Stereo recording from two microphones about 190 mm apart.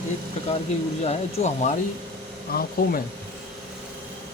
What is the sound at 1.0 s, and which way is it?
Speech, 35° left (ahead or behind).